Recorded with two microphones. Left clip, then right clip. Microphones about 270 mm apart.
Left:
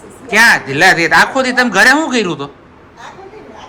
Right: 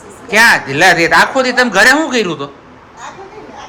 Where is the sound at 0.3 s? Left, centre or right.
Centre.